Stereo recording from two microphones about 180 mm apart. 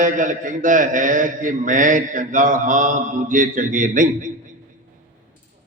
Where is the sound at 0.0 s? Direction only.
45° right (ahead or behind).